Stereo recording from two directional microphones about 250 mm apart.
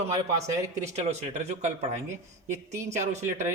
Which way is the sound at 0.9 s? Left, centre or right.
Right.